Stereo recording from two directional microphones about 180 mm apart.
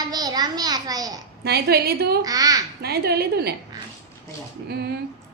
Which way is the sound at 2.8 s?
60° right (ahead or behind).